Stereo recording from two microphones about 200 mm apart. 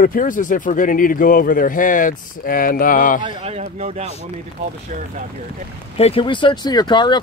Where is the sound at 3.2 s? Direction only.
25° right (ahead or behind).